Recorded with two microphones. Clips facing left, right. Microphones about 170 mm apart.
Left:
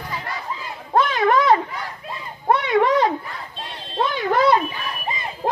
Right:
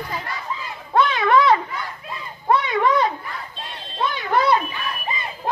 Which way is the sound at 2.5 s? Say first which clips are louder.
Left 1 dB; 65° left (ahead or behind).